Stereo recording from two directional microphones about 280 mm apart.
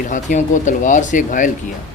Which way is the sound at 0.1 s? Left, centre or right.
Left.